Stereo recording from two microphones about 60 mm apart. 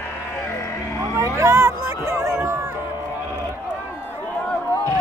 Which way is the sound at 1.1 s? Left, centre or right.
Right.